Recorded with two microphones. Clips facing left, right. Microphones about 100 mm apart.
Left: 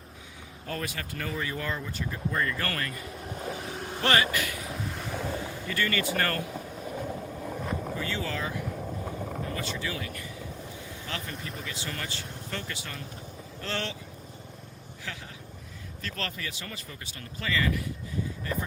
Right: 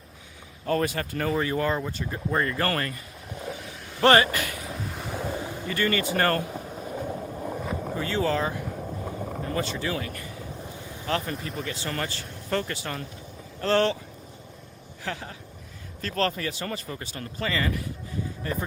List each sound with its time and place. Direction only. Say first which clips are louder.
0.7 s speech: right 9 dB; 40° right (ahead or behind)
3.8 s vehicle: left 5 dB; 45° left (ahead or behind)
4.0 s speech: right 7 dB; 40° right (ahead or behind)
4.6 s boat: right 1 dB; centre (ahead or behind)
5.3 s boat: right 2 dB; 20° right (ahead or behind)
5.6 s speech: right 4 dB; 35° right (ahead or behind)
6.5 s vehicle: right 2 dB; 20° right (ahead or behind)
6.9 s vehicle: right 3 dB; 10° right (ahead or behind)
7.9 s speech: right 7 dB; 40° right (ahead or behind)
8.6 s vehicle: right 1 dB; 5° right (ahead or behind)
9.4 s speech: right 7 dB; 35° right (ahead or behind)
15.0 s speech: right 7 dB; 45° right (ahead or behind)